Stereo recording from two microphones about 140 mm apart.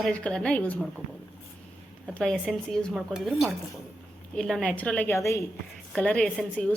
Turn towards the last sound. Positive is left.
turn(degrees=5)  # may be behind; listen again after turning